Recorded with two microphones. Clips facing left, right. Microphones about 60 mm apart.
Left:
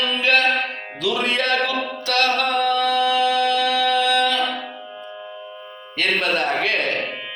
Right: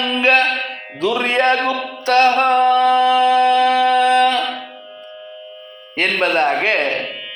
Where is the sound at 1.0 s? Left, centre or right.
Right.